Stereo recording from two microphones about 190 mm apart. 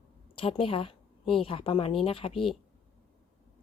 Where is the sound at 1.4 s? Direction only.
30° left (ahead or behind).